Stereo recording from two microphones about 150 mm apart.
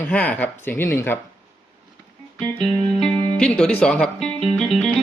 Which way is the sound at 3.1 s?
5° left (ahead or behind).